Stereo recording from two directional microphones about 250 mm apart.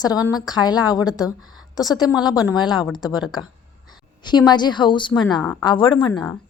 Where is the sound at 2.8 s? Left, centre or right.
Centre.